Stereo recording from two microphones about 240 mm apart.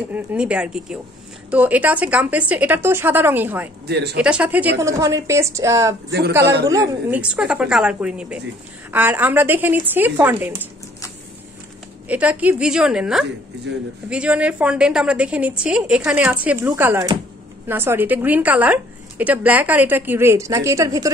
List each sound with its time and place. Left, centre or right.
0.1 s a woman's voice: centre
3.8 s speech: right
4.2 s a woman's voice: centre
6.4 s speech: right
6.7 s a woman's voice: centre
12.1 s a woman's voice: centre